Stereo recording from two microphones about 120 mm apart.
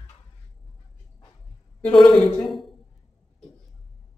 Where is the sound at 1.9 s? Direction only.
5° left (ahead or behind).